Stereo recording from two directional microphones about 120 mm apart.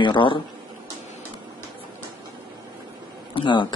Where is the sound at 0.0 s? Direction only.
40° left (ahead or behind).